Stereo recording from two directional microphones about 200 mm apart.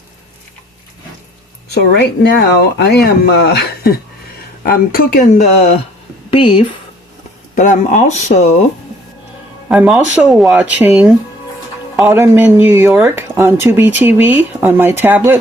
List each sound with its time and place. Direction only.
1.7 s speech: 55° left (ahead or behind)
6.3 s speech: 25° left (ahead or behind)
7.5 s speech: 40° left (ahead or behind)
9.6 s speech: 5° right (ahead or behind)